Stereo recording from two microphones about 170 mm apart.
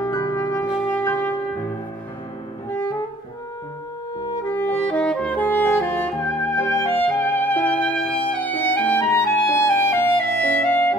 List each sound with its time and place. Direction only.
0.0 s music: 20° left (ahead or behind)
2.7 s music: 15° left (ahead or behind)
4.5 s music: 10° left (ahead or behind)
8.0 s music: 30° left (ahead or behind)
8.3 s music: 10° left (ahead or behind)